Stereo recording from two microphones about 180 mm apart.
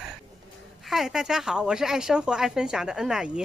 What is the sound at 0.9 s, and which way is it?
Speech, centre (ahead or behind).